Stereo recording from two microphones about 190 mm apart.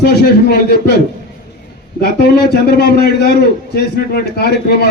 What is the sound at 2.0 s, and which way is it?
Speech, 55° left (ahead or behind).